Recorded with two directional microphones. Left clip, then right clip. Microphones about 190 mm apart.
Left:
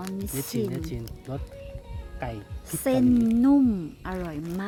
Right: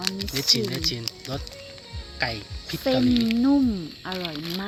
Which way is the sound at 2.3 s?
20° left (ahead or behind).